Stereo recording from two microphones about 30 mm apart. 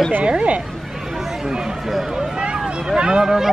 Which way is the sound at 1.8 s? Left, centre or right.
Centre.